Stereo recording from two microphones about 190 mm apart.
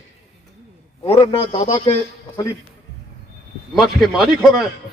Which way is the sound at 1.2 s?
30° left (ahead or behind).